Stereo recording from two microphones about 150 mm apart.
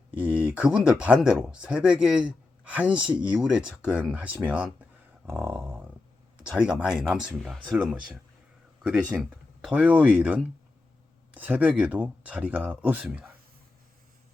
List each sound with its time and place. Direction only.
0.1 s speech: 10° right (ahead or behind)
5.2 s a sound: 10° right (ahead or behind)
5.5 s speech: 10° right (ahead or behind)